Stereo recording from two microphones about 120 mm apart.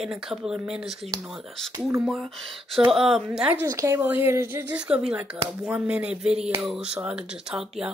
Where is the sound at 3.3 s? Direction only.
15° right (ahead or behind).